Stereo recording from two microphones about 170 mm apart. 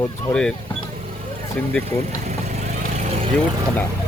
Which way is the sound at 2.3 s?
45° right (ahead or behind).